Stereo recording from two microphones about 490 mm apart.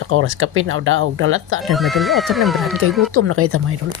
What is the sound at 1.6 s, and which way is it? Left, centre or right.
Speech, centre.